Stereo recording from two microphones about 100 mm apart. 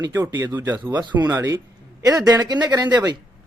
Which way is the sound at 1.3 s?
25° right (ahead or behind).